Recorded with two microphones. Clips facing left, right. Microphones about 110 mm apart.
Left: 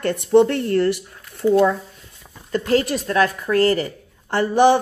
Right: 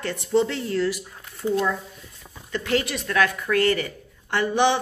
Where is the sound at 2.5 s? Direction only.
40° left (ahead or behind).